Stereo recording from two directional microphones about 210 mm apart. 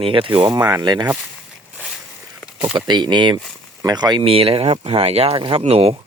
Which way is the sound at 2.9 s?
20° right (ahead or behind).